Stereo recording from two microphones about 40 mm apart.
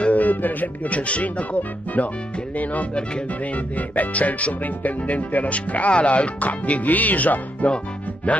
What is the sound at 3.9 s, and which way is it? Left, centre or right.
Music, left.